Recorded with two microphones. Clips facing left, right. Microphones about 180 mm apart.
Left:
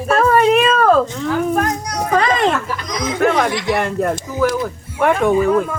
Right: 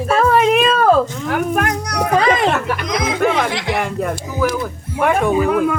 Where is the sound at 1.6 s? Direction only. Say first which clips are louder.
Right 1 dB; 70° right (ahead or behind).